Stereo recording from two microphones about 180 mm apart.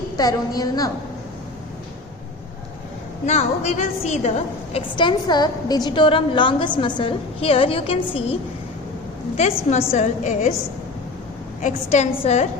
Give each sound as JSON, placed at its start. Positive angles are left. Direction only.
{"t": 0.2, "sound": "a woman's voice", "side_deg": 20}
{"t": 3.2, "sound": "a woman's voice", "side_deg": 40}
{"t": 9.4, "sound": "a woman's voice", "side_deg": 35}
{"t": 11.6, "sound": "a woman's voice", "side_deg": 40}